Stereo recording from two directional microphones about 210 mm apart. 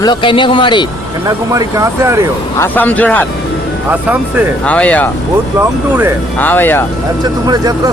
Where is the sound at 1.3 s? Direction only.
15° right (ahead or behind).